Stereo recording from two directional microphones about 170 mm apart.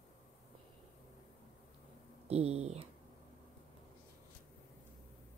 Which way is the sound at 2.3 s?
40° right (ahead or behind).